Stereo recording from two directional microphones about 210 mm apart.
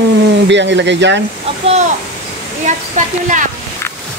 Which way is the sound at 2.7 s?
35° right (ahead or behind).